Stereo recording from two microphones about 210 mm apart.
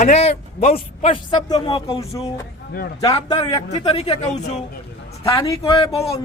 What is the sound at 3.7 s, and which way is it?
Speech, 30° left (ahead or behind).